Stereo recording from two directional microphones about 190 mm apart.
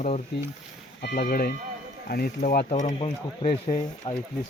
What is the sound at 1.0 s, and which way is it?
Speech, 55° left (ahead or behind).